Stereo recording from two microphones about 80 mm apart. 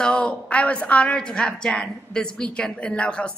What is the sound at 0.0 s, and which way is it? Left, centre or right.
A woman's voice, centre.